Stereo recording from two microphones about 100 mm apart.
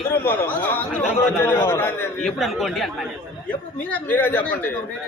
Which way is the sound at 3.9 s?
20° left (ahead or behind).